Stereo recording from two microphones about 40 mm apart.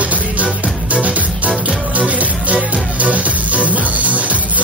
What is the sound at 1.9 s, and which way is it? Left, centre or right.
Music, right.